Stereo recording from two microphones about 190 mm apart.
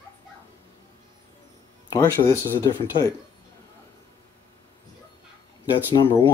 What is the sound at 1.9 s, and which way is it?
Speech, 15° left (ahead or behind).